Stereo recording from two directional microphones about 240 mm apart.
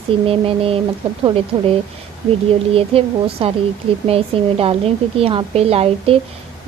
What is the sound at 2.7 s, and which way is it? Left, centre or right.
Speech, right.